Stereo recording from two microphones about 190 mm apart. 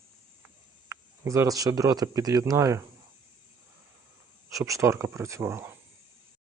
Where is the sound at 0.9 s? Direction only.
15° right (ahead or behind).